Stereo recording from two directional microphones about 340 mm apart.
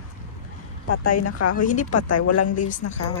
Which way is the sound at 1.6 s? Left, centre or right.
Left.